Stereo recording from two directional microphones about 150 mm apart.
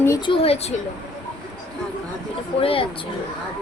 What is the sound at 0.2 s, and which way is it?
Speech, 35° left (ahead or behind).